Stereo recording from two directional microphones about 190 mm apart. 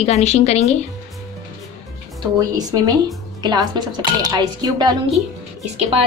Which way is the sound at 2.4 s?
20° right (ahead or behind).